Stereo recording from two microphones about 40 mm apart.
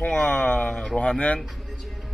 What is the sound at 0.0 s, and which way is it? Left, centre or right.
A man's voice, left.